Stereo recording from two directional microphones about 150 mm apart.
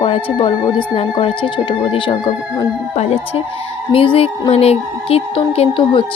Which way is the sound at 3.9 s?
40° left (ahead or behind).